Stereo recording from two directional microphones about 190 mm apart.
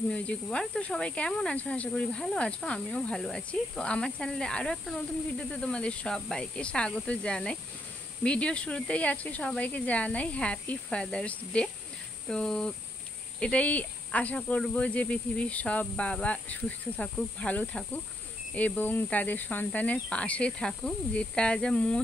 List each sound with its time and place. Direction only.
0.1 s speech: 5° left (ahead or behind)